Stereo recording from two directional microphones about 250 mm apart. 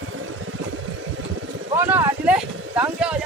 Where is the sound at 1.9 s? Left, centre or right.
Centre.